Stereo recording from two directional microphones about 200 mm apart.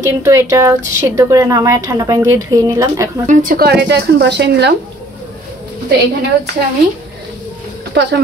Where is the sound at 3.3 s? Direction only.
45° right (ahead or behind).